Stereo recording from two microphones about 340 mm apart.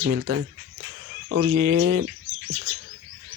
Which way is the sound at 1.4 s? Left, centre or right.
Right.